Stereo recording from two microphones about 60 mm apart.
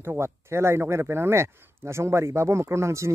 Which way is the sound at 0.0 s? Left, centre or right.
Right.